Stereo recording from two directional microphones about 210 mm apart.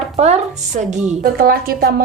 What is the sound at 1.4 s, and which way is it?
Speech, 45° right (ahead or behind).